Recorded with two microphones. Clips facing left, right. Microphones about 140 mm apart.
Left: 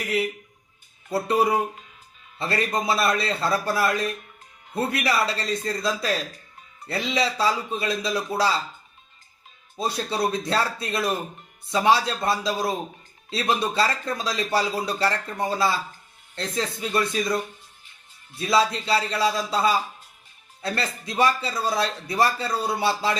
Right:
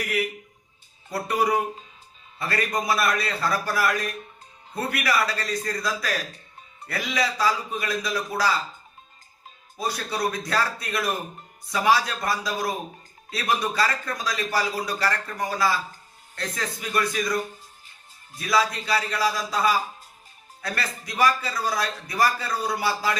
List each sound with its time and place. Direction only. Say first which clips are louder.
1.1 s a man's voice: left 2 dB; 25° left (ahead or behind)
9.7 s a man's voice: left 2 dB; 25° left (ahead or behind)